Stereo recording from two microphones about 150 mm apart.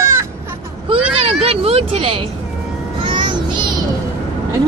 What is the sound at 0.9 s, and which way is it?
Vehicle, 40° right (ahead or behind).